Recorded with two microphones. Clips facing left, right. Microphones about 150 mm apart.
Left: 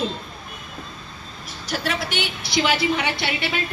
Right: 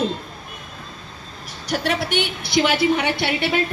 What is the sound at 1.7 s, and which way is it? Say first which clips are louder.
A woman's voice: right 4 dB; 60° right (ahead or behind).